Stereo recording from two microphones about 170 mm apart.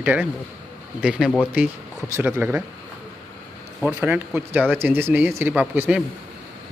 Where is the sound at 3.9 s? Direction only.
10° right (ahead or behind).